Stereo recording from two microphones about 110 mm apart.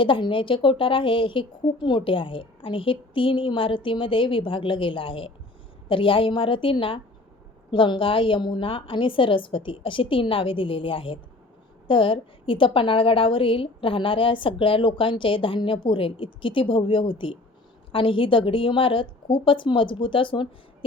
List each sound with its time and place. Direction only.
0.0 s a woman's voice: 50° left (ahead or behind)